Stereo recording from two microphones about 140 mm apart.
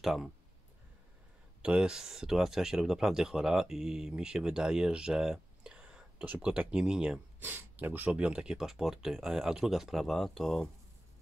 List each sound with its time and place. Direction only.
0.0 s speech: centre (ahead or behind)
1.6 s speech: 5° right (ahead or behind)